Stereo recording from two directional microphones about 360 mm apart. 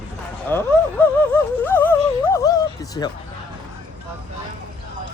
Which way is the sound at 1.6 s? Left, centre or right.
Centre.